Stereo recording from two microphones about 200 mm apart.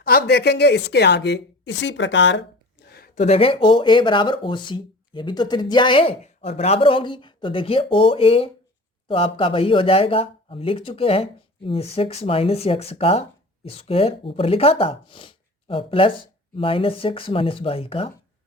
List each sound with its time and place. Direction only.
0.0 s speech: 50° left (ahead or behind); by 2.4 s 65° left (ahead or behind)
2.8 s a sound: 50° left (ahead or behind)
3.2 s speech: 30° left (ahead or behind)